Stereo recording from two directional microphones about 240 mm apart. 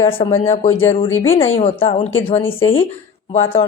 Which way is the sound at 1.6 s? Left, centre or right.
Left.